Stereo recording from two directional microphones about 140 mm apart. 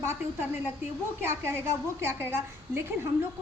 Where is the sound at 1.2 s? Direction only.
20° right (ahead or behind).